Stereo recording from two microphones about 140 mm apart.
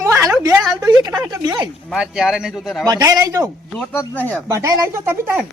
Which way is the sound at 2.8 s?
25° right (ahead or behind).